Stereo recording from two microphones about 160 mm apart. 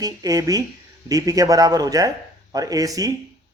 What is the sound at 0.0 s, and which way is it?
A man's voice, 20° right (ahead or behind).